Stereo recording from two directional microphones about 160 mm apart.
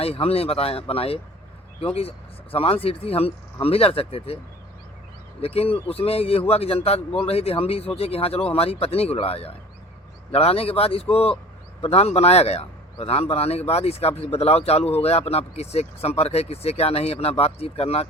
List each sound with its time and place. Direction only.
0.0 s a man's voice: 40° left (ahead or behind)
5.4 s a man's voice: 40° left (ahead or behind)